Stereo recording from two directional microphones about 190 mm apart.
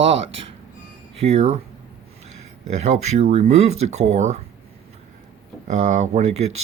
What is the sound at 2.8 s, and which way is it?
Speech, 35° right (ahead or behind).